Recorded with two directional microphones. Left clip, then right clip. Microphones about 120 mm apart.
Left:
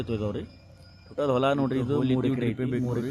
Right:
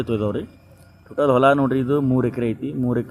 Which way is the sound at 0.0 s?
25° right (ahead or behind).